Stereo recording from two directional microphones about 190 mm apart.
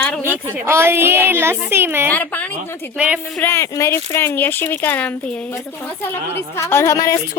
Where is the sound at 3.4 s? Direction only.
15° left (ahead or behind).